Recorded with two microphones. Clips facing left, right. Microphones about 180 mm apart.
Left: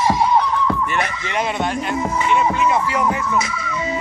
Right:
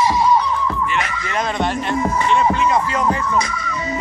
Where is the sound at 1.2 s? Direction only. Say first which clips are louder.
Even; 20° left (ahead or behind).